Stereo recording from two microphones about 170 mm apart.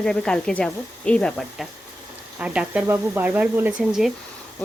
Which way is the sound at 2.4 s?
5° right (ahead or behind).